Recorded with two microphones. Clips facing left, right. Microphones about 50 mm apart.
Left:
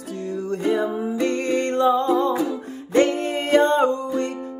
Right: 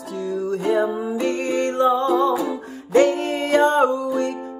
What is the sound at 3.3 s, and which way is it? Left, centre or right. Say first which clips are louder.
Music: left 3 dB; left.